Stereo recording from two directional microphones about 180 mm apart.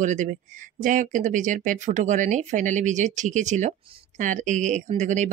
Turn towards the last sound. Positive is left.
turn(degrees=-40)  # may be behind; listen again after turning